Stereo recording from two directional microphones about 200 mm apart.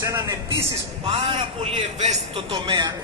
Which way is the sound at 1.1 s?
25° right (ahead or behind).